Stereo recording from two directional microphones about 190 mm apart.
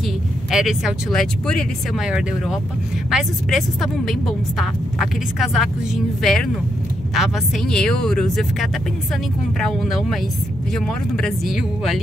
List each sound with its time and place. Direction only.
0.5 s a woman's voice: centre (ahead or behind)